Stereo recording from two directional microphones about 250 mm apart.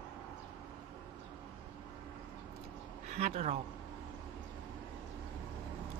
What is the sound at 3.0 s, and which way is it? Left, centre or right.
Speech, right.